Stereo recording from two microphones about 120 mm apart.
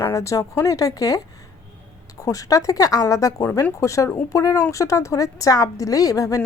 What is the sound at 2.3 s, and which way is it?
A woman's voice, 30° left (ahead or behind).